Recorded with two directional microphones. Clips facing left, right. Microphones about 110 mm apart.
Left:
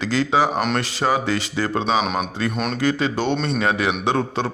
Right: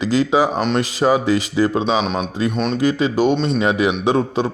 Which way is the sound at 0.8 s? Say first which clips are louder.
Right 5 dB; 20° right (ahead or behind).